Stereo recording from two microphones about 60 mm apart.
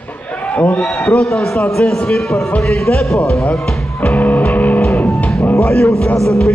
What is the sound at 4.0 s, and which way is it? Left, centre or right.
Music, left.